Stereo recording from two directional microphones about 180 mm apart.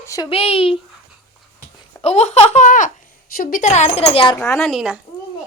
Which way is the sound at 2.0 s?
35° left (ahead or behind).